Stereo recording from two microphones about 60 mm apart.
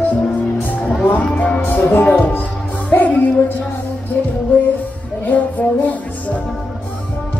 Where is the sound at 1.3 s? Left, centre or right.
Left.